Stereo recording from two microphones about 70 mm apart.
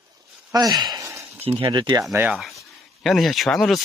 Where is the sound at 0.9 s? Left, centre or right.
Right.